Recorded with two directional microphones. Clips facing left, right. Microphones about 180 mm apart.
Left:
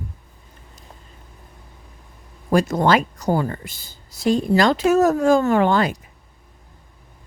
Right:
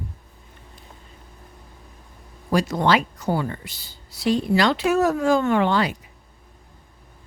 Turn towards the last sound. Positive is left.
turn(degrees=45)  # may be behind; listen again after turning